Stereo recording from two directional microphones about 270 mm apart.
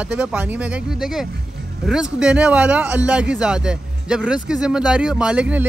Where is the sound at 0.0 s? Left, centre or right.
Centre.